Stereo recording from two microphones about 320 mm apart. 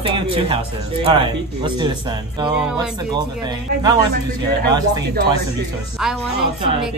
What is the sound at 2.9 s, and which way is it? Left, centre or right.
Speech, centre.